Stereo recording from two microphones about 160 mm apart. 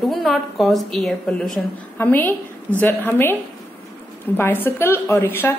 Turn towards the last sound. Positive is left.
turn(degrees=15)  # may be behind; listen again after turning